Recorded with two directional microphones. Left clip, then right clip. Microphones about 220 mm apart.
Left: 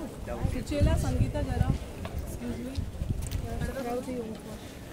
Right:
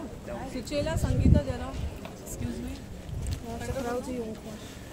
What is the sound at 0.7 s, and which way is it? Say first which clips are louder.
Speech: right 1 dB; 35° right (ahead or behind).